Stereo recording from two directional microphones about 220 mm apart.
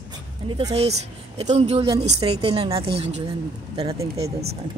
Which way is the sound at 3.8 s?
15° right (ahead or behind).